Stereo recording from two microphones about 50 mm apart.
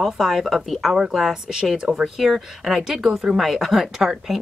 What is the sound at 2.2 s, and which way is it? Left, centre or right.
A woman's voice, centre.